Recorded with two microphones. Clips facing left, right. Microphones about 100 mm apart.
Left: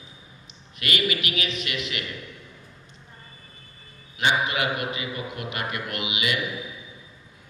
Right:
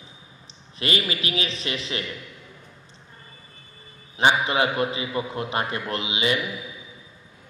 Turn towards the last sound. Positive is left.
turn(degrees=-30)  # may be behind; listen again after turning